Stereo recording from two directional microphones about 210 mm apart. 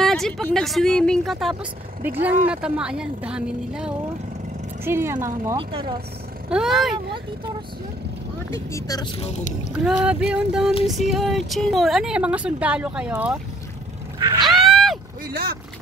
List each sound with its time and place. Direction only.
0.0 s speech: centre (ahead or behind)
5.6 s speech: 25° right (ahead or behind)
6.5 s speech: centre (ahead or behind)
8.7 s speech: 15° left (ahead or behind)
9.7 s speech: 5° right (ahead or behind)
14.4 s a sound: centre (ahead or behind)